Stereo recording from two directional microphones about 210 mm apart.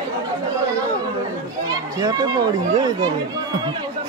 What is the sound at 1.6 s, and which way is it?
Children playing, 15° right (ahead or behind).